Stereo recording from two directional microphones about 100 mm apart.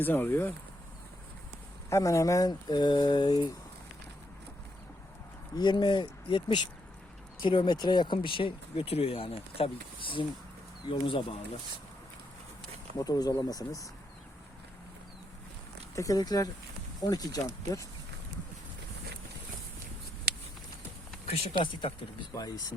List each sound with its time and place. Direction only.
0.0 s speech: 20° left (ahead or behind)
1.9 s speech: 30° left (ahead or behind)
5.5 s speech: 50° left (ahead or behind)
13.0 s speech: 40° left (ahead or behind)
16.0 s speech: 35° left (ahead or behind)
21.6 s speech: 60° left (ahead or behind)
22.4 s speech: 40° left (ahead or behind)